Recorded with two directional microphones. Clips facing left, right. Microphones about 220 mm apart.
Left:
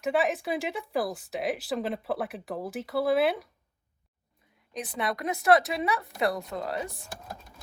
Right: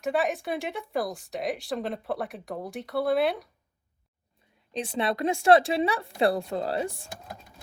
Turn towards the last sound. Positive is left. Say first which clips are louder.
# right 4 dB
turn(degrees=-30)  # may be behind; listen again after turning